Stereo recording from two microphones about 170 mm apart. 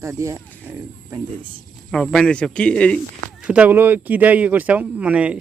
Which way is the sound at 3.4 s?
10° right (ahead or behind).